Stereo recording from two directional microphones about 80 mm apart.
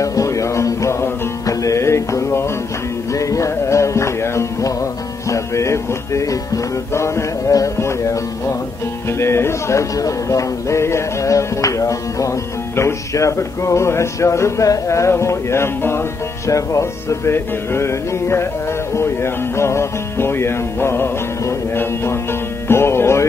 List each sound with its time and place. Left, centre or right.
0.0 s music: left
9.2 s speech: left
18.9 s music: left